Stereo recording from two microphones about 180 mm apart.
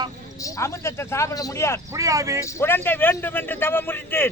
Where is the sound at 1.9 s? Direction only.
20° right (ahead or behind).